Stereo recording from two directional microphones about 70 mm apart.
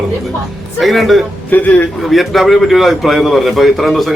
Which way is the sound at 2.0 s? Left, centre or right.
Centre.